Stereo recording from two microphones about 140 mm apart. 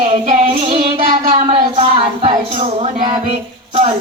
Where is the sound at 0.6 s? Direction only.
40° right (ahead or behind).